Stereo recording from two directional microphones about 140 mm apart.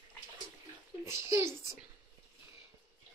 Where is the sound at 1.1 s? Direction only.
20° right (ahead or behind).